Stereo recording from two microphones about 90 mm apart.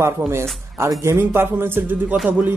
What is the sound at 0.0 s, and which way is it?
A man's voice, 30° right (ahead or behind).